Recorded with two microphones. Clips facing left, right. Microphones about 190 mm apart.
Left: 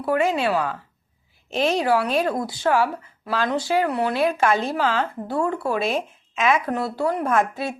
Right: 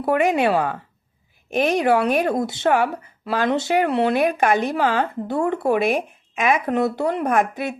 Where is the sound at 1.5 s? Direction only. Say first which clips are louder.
Right 2 dB; 50° right (ahead or behind).